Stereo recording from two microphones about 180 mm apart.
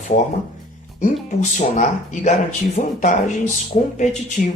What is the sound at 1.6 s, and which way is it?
Speech, 45° left (ahead or behind).